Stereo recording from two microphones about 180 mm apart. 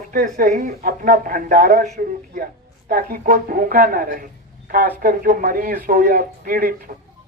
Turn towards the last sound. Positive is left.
turn(degrees=-50)  # may be behind; listen again after turning